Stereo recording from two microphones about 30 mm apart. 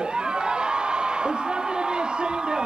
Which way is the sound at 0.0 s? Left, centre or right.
Right.